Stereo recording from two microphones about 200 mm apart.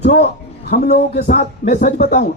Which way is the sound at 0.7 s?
55° left (ahead or behind).